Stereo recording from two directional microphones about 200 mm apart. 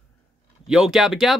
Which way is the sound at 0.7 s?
5° right (ahead or behind).